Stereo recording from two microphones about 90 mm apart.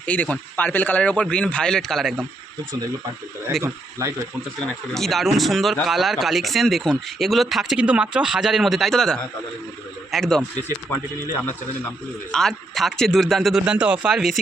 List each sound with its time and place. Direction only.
0.0 s speech: 15° left (ahead or behind)
4.0 s speech: 35° right (ahead or behind)
4.9 s speech: centre (ahead or behind)
7.8 s speech: 15° right (ahead or behind); by 10.4 s 5° left (ahead or behind)
12.3 s speech: 5° left (ahead or behind)
13.7 s speech: 15° right (ahead or behind)